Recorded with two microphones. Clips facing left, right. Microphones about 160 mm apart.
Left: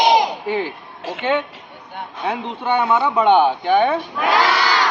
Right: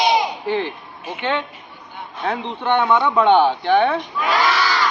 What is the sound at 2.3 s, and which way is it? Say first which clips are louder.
Speech: right 1 dB; 5° left (ahead or behind).